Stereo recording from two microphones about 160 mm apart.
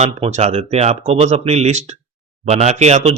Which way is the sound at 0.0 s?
45° right (ahead or behind).